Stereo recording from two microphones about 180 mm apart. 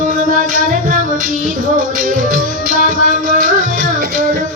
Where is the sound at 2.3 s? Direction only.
50° right (ahead or behind).